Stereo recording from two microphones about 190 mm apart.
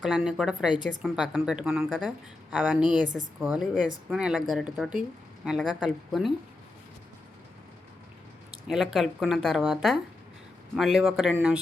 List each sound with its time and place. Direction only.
0.0 s speech: centre (ahead or behind)
2.9 s speech: 45° right (ahead or behind)
3.4 s a woman's voice: 5° right (ahead or behind)
8.6 s speech: centre (ahead or behind)